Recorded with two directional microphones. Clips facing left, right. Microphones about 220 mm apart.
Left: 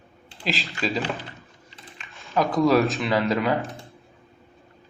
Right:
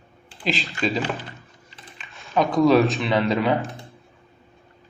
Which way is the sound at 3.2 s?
20° right (ahead or behind).